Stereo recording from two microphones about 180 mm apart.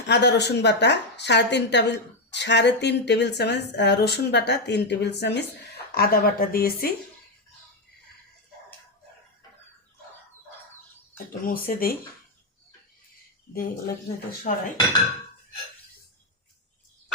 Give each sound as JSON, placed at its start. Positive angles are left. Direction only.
{"t": 0.1, "sound": "a woman's voice", "side_deg": 70}
{"t": 11.3, "sound": "speech", "side_deg": 55}
{"t": 13.5, "sound": "speech", "side_deg": 55}
{"t": 14.5, "sound": "dishes", "side_deg": 45}